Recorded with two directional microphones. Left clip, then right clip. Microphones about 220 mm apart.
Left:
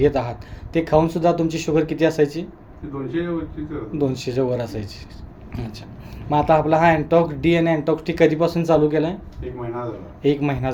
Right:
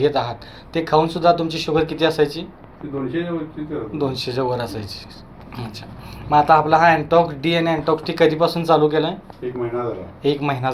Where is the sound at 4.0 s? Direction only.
35° left (ahead or behind).